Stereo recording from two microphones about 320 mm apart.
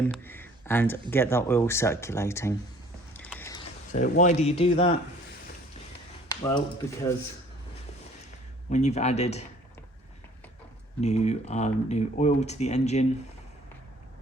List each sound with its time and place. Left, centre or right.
0.1 s a sound: centre
1.1 s speech: centre
3.1 s a sound: centre
3.9 s speech: left
6.2 s speech: centre
8.7 s speech: left
11.0 s speech: left